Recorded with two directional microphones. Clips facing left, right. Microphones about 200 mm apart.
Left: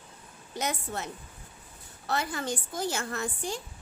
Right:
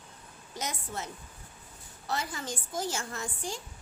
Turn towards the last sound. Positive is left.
turn(degrees=60)  # may be behind; listen again after turning